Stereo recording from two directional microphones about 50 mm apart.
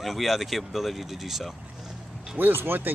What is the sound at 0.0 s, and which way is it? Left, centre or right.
Speech, centre.